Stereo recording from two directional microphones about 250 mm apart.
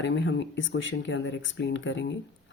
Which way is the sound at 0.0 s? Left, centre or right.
Left.